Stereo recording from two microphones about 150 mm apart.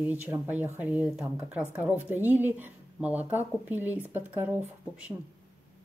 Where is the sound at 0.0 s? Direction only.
10° right (ahead or behind).